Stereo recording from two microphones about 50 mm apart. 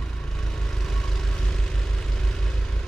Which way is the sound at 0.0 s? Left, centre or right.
Centre.